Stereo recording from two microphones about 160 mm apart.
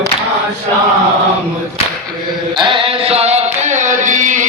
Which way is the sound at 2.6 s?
35° right (ahead or behind).